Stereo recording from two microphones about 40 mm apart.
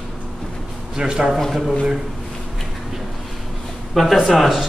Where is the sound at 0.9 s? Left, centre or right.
Centre.